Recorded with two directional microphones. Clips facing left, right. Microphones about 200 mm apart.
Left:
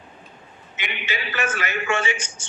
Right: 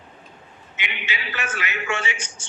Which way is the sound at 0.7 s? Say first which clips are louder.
Left 2 dB; 45° left (ahead or behind).